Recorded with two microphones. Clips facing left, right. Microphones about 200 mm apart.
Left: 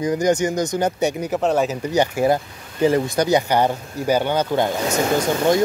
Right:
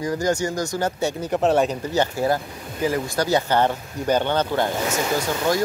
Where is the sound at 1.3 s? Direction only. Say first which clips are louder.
Right 4 dB; centre (ahead or behind).